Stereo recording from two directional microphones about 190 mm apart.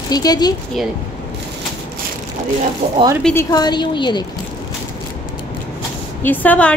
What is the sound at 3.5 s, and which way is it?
Speech, 20° left (ahead or behind).